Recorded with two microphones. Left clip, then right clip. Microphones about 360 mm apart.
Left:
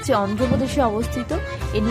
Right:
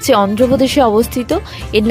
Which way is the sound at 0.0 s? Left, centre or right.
Right.